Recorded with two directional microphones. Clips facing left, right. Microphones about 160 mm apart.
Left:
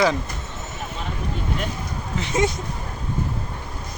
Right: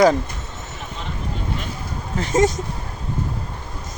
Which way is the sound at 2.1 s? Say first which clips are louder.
Right 4 dB; 40° right (ahead or behind).